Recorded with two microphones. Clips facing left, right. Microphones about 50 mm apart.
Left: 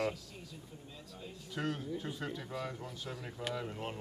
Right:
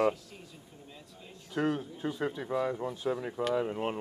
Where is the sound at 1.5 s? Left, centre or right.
Right.